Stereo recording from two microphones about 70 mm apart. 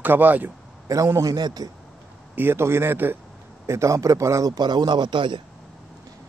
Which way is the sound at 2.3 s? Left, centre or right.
Right.